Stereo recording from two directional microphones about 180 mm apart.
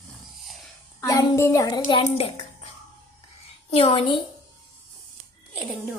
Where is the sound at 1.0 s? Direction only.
20° left (ahead or behind).